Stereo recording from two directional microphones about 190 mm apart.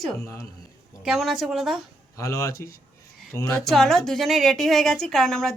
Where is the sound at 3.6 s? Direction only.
Centre (ahead or behind).